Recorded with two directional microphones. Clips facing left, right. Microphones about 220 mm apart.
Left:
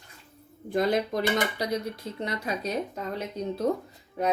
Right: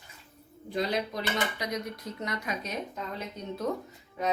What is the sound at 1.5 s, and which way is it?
Speech, 30° left (ahead or behind).